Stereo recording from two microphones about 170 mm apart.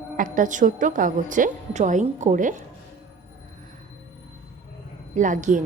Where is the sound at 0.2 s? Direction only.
50° right (ahead or behind).